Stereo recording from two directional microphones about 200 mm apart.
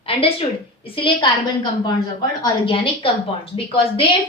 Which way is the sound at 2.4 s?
25° left (ahead or behind).